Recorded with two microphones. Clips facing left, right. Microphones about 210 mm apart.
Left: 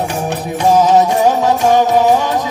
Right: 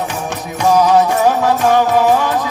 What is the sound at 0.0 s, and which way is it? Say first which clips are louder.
Music: left 3 dB; 35° left (ahead or behind).